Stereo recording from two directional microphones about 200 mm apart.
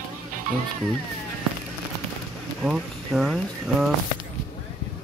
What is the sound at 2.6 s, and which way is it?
Speech, centre (ahead or behind).